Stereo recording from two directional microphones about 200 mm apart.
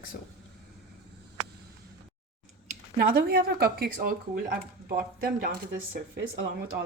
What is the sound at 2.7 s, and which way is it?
Speech, 50° right (ahead or behind).